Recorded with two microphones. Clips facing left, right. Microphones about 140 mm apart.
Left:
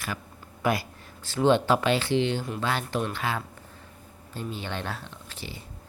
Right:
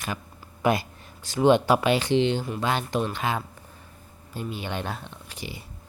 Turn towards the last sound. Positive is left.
turn(degrees=-15)  # may be behind; listen again after turning